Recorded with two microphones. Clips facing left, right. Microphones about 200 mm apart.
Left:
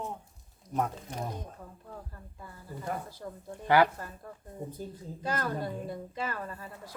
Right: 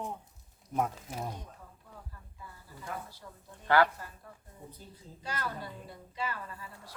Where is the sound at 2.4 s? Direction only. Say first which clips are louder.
Left 7 dB; 50° left (ahead or behind).